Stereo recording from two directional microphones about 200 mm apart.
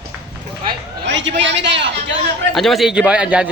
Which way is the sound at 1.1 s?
65° right (ahead or behind).